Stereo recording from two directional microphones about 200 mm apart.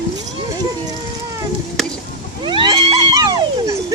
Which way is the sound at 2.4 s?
25° right (ahead or behind).